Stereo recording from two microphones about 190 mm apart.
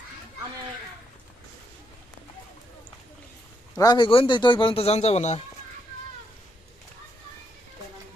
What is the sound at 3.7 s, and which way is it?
A man's voice, 20° left (ahead or behind).